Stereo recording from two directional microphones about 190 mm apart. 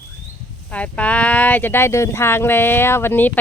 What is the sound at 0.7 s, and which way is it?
Speech, 5° left (ahead or behind).